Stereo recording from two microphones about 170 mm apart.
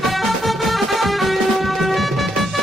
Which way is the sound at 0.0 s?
Centre (ahead or behind).